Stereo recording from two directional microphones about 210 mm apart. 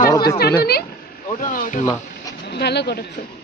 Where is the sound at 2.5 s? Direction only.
50° left (ahead or behind).